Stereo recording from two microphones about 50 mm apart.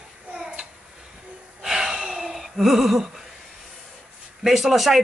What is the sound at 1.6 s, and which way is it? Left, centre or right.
Gasp, centre.